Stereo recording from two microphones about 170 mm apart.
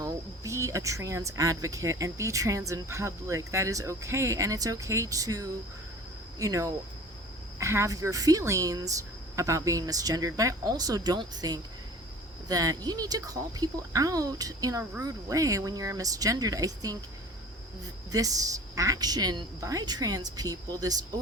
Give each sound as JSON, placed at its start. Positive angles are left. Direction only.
{"t": 0.0, "sound": "speech", "side_deg": -15}
{"t": 18.1, "sound": "speech", "side_deg": -20}